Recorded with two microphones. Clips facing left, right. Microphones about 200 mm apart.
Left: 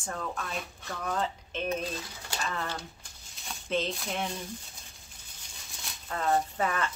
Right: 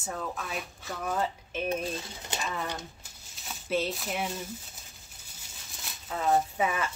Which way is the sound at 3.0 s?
5° right (ahead or behind).